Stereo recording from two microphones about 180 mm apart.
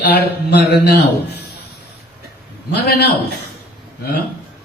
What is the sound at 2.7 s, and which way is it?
Mantra, 65° left (ahead or behind).